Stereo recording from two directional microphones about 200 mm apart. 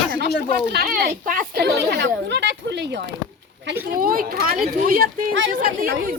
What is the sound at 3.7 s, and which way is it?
Speech, 45° right (ahead or behind).